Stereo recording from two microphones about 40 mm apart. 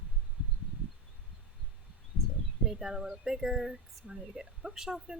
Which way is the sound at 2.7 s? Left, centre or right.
Centre.